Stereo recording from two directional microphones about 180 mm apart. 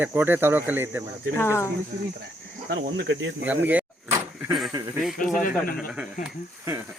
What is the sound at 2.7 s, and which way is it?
Speech, 65° right (ahead or behind).